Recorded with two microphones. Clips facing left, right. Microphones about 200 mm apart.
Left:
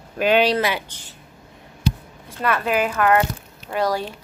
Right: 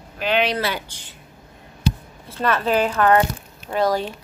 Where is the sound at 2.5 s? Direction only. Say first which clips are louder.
Right 2 dB; 30° right (ahead or behind).